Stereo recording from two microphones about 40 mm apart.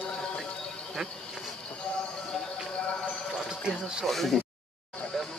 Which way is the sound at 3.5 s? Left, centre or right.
Centre.